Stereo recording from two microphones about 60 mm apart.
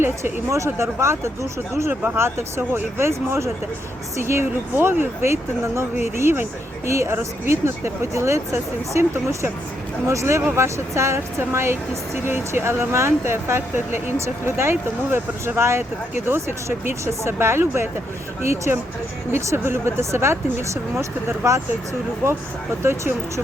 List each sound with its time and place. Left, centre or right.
0.0 s speech: right
3.1 s speech: right
22.8 s speech: right